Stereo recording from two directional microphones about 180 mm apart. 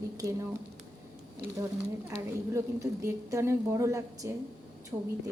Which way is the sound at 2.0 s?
15° right (ahead or behind).